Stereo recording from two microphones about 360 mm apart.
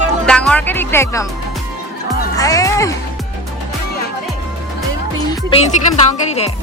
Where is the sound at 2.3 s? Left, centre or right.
Centre.